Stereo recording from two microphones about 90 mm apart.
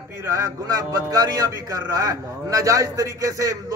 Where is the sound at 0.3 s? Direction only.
35° right (ahead or behind).